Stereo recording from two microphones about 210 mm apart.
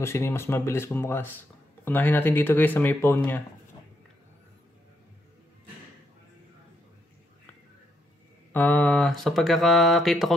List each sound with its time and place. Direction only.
0.0 s speech: 10° left (ahead or behind)
8.5 s speech: 5° left (ahead or behind)